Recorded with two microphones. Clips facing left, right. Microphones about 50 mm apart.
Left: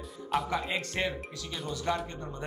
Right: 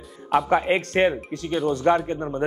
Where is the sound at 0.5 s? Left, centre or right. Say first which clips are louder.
Right 11 dB; right.